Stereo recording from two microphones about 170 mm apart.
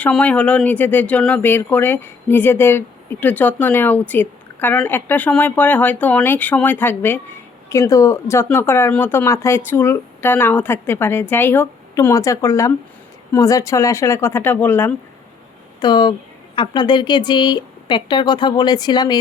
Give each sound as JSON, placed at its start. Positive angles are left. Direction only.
{"t": 0.0, "sound": "speech", "side_deg": 5}
{"t": 15.8, "sound": "speech", "side_deg": 25}